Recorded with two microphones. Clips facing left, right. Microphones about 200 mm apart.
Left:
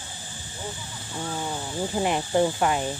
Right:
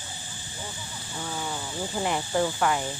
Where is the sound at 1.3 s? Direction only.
20° left (ahead or behind).